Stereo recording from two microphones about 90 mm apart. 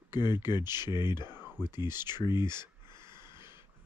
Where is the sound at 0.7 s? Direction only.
55° left (ahead or behind).